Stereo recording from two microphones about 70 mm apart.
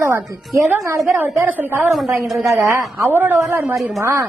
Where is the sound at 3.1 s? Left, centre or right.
Right.